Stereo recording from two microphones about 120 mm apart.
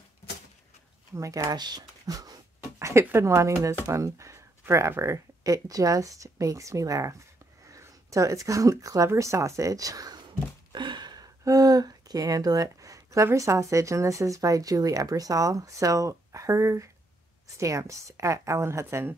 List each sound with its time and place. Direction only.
1.1 s speech: 30° right (ahead or behind)